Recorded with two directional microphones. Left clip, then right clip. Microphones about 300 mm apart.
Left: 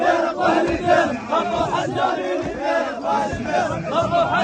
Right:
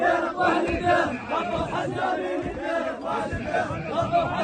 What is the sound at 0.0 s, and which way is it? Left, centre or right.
Crowd, centre.